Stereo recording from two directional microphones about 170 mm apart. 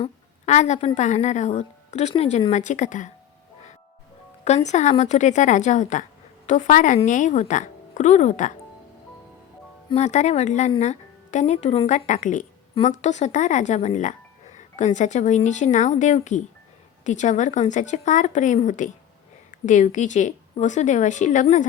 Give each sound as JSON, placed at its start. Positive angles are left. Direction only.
{"t": 0.0, "sound": "a woman's voice", "side_deg": 40}
{"t": 4.4, "sound": "a woman's voice", "side_deg": 40}
{"t": 9.9, "sound": "a woman's voice", "side_deg": 40}